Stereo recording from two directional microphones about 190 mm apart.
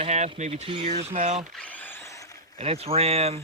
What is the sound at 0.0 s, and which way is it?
Speech, 35° right (ahead or behind).